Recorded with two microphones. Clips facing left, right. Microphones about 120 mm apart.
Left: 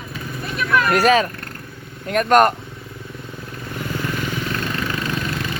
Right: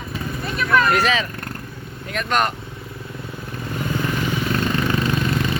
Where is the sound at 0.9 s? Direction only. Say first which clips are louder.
Left 4 dB; 45° left (ahead or behind).